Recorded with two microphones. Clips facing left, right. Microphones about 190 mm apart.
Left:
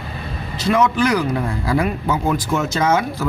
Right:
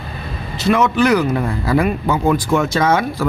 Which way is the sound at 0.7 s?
65° right (ahead or behind).